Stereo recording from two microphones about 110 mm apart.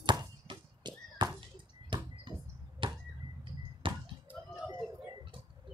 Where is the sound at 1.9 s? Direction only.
50° right (ahead or behind).